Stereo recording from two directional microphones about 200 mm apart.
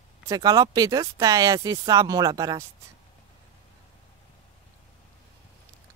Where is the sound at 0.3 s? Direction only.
15° right (ahead or behind).